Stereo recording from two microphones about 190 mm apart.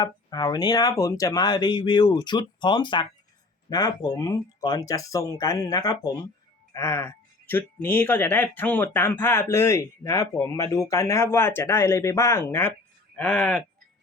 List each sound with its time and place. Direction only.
0.0 s speech: 20° left (ahead or behind); by 13.7 s 5° left (ahead or behind)